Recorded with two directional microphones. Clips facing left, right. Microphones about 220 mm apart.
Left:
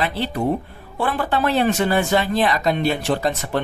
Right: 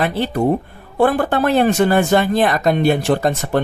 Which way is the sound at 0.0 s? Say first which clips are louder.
Right 5 dB; 50° right (ahead or behind).